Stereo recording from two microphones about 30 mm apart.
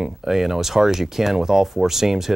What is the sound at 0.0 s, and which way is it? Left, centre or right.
Speech, centre.